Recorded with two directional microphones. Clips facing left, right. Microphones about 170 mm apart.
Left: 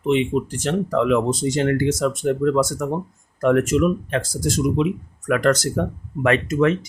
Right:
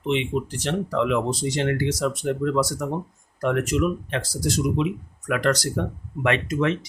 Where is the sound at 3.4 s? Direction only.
45° left (ahead or behind).